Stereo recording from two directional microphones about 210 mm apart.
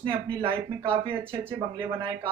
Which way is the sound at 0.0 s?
25° right (ahead or behind).